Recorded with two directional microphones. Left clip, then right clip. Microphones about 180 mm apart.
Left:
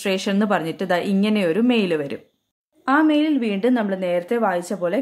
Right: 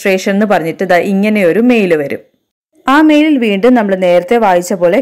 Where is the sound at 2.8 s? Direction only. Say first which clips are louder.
Right 10 dB; 35° right (ahead or behind).